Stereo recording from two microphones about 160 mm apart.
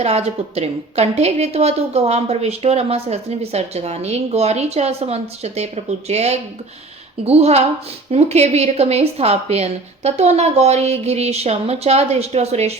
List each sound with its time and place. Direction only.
0.0 s a woman's voice: 40° right (ahead or behind)